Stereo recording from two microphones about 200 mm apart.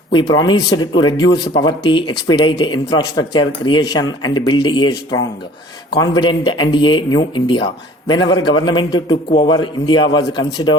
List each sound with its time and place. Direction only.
0.1 s speech: 20° left (ahead or behind)